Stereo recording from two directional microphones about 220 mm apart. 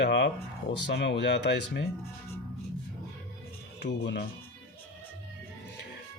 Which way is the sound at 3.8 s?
50° left (ahead or behind).